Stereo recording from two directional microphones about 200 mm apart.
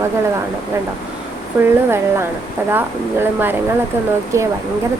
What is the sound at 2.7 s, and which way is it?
A woman's voice, 10° right (ahead or behind).